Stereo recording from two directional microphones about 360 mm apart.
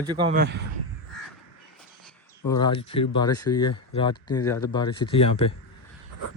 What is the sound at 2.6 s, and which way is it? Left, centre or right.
Speech, centre.